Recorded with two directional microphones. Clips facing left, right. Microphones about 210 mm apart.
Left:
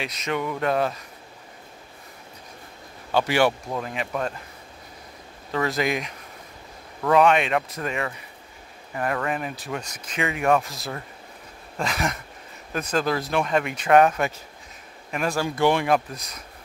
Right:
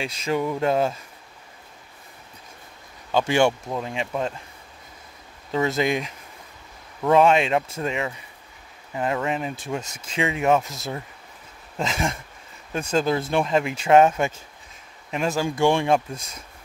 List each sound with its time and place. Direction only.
0.0 s speech: 30° right (ahead or behind)
3.8 s speech: 25° right (ahead or behind)
5.5 s speech: 25° right (ahead or behind)